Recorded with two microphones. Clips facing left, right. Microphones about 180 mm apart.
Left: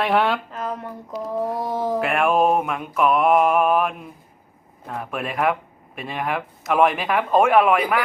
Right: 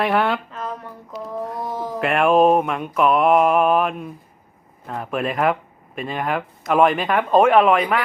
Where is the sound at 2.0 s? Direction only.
Centre (ahead or behind).